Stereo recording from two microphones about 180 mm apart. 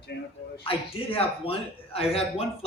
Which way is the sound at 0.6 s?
30° left (ahead or behind).